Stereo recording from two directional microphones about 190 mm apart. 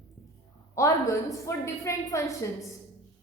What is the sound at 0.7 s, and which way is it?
A woman's voice, 15° left (ahead or behind).